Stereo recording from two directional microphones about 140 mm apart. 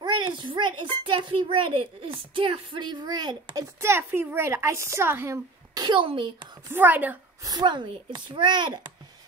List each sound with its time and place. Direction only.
0.0 s a sound: 35° right (ahead or behind)
1.0 s a child's voice: 35° right (ahead or behind)
3.8 s speech: 15° right (ahead or behind)
5.8 s a child's voice: 35° right (ahead or behind)
6.7 s a woman's voice: 10° right (ahead or behind)
7.4 s a child's voice: 30° right (ahead or behind)